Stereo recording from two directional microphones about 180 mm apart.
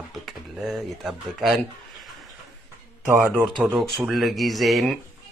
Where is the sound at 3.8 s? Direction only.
Centre (ahead or behind).